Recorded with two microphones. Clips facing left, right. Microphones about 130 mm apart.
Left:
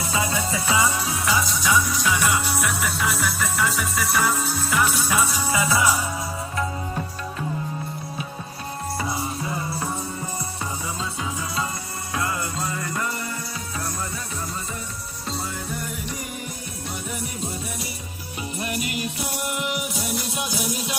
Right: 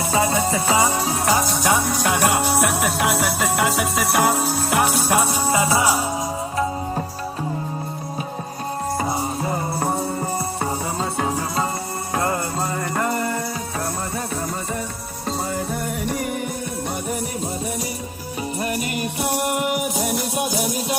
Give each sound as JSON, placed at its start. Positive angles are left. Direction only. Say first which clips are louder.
{"t": 0.0, "sound": "music", "louder": "right 6 dB", "side_deg": -45}
{"t": 9.0, "sound": "music", "louder": "right 2 dB", "side_deg": -45}
{"t": 18.6, "sound": "music", "louder": "right 2 dB", "side_deg": -45}